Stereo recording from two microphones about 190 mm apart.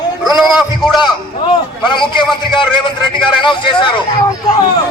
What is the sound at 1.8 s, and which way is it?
A man's voice, 25° left (ahead or behind).